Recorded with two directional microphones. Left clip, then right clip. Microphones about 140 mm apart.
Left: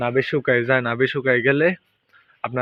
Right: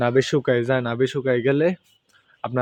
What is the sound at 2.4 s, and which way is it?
Speech, 40° right (ahead or behind).